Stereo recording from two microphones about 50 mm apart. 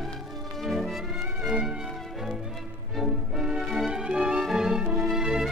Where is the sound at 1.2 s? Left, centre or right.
Centre.